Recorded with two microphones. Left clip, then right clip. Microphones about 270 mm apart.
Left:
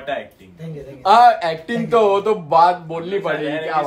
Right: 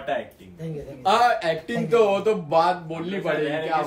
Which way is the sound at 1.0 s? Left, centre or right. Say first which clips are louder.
Left 8 dB; left.